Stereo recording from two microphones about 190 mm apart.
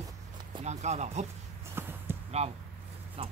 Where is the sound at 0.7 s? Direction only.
35° right (ahead or behind).